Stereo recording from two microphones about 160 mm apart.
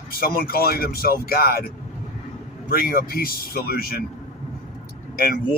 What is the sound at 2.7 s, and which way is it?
Speech, 65° left (ahead or behind).